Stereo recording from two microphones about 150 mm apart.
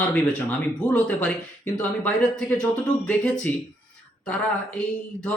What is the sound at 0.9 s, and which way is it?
Speech, 10° left (ahead or behind).